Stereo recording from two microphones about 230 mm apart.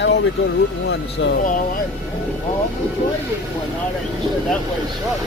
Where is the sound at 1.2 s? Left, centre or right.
Left.